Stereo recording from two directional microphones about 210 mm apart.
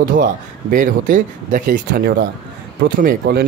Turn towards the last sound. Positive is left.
turn(degrees=-45)  # may be behind; listen again after turning